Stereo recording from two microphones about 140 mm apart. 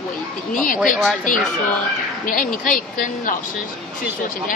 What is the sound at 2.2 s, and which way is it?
Speech, 80° left.